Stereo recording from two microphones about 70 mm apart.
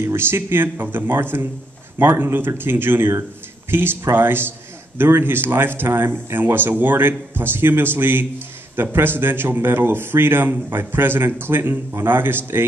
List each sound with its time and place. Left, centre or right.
0.0 s a man's voice: right